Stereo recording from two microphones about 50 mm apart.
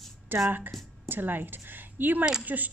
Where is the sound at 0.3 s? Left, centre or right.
Right.